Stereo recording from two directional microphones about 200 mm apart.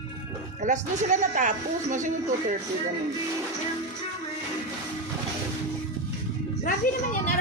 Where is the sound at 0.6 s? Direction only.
40° right (ahead or behind).